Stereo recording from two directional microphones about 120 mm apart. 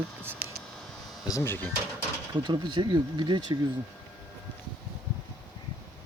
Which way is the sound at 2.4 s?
40° right (ahead or behind).